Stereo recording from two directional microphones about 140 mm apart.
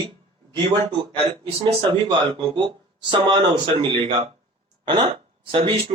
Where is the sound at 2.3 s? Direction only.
35° right (ahead or behind).